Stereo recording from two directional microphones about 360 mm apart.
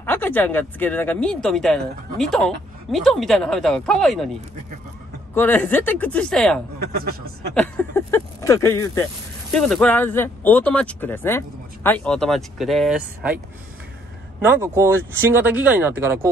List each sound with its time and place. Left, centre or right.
0.0 s speech: centre
5.3 s speech: centre
6.8 s a man's voice: right
7.5 s speech: centre
14.4 s speech: centre